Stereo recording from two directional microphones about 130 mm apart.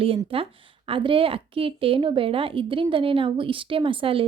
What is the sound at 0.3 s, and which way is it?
A woman's voice, 45° right (ahead or behind).